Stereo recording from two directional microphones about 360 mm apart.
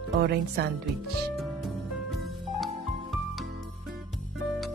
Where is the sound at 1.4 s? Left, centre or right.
Centre.